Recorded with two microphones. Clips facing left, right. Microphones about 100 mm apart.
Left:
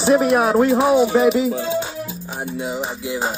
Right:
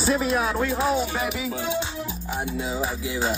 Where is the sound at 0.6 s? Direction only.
30° left (ahead or behind).